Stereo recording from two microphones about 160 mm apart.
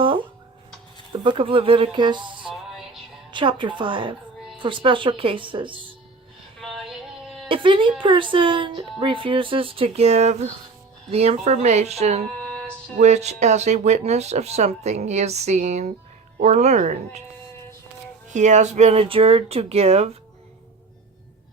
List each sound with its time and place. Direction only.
0.0 s music: 30° right (ahead or behind)
1.1 s speech: 30° right (ahead or behind)
2.5 s music: 5° right (ahead or behind)
3.3 s speech: 30° right (ahead or behind)
6.6 s synthetic singing: centre (ahead or behind)
7.4 s speech: 30° right (ahead or behind)
12.4 s music: 5° left (ahead or behind)
13.0 s speech: 45° right (ahead or behind)
18.3 s speech: 50° right (ahead or behind)